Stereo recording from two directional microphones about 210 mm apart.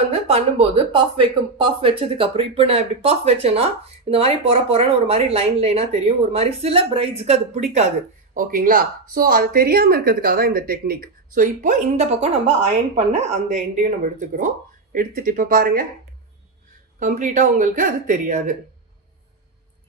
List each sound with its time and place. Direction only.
0.1 s speech: 30° right (ahead or behind)
17.0 s speech: 35° right (ahead or behind)